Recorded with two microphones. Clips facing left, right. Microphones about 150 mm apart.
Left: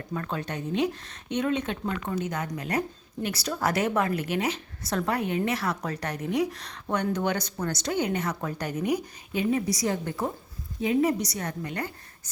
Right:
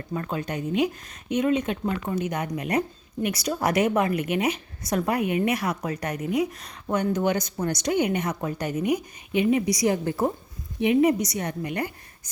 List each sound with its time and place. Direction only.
0.1 s a woman's voice: 10° right (ahead or behind)
9.0 s speech: 65° right (ahead or behind)
9.5 s a woman's voice: 15° right (ahead or behind)